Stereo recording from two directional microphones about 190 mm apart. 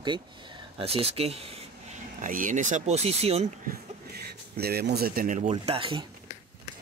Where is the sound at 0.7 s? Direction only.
30° right (ahead or behind).